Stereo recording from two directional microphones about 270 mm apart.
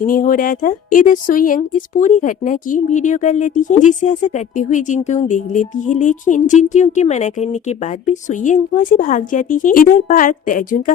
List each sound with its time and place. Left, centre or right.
0.0 s speech: left